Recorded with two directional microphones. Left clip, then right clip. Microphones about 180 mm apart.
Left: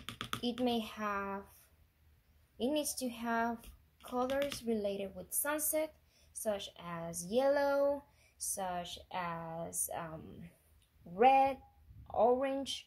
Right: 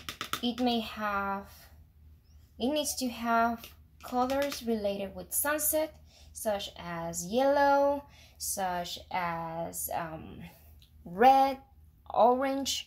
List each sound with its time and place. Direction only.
0.5 s a child's voice: 30° left (ahead or behind)
2.5 s a woman's voice: 30° left (ahead or behind)
8.5 s a woman's voice: 10° left (ahead or behind)
11.1 s a woman's voice: centre (ahead or behind)